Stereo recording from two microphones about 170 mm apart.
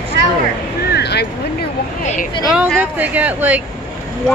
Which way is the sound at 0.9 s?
75° left (ahead or behind).